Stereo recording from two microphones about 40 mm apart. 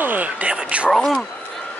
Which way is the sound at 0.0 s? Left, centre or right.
Right.